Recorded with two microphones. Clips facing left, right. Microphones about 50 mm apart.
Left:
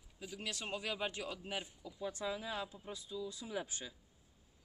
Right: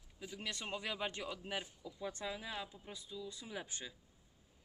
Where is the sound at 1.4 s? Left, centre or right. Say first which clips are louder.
Even; centre.